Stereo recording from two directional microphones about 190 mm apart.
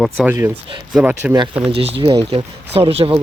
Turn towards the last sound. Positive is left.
turn(degrees=-30)  # may be behind; listen again after turning